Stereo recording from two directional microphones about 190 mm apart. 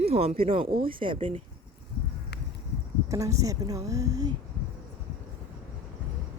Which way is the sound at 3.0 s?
15° right (ahead or behind).